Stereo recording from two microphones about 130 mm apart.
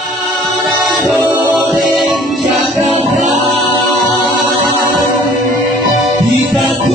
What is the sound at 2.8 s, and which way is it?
Music, 60° right (ahead or behind).